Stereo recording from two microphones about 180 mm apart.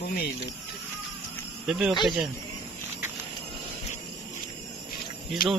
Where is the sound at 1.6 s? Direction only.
5° right (ahead or behind).